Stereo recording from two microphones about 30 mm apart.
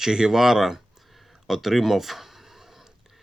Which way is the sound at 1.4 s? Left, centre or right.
Centre.